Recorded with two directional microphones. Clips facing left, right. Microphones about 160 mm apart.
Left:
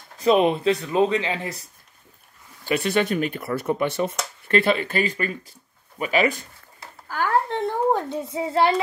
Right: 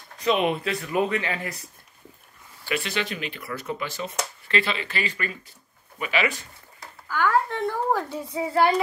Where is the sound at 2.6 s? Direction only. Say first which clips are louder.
Left 7 dB; 50° left (ahead or behind).